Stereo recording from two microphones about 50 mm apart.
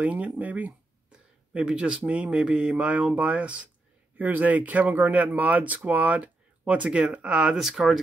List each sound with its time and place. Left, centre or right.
0.0 s speech: right
1.1 s a sound: right
2.0 s speech: right
4.2 s speech: right; by 7.5 s centre
7.5 s speech: centre